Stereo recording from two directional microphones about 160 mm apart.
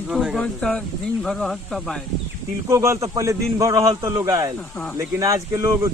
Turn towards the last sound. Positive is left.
turn(degrees=-15)  # may be behind; listen again after turning